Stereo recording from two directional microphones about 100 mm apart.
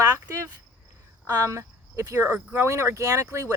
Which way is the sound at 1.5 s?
30° right (ahead or behind).